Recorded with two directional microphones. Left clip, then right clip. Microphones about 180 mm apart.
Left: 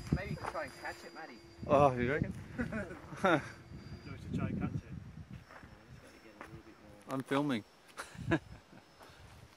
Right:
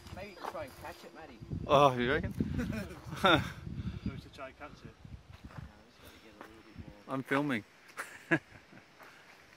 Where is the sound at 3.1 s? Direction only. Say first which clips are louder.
Right 4 dB; 10° right (ahead or behind).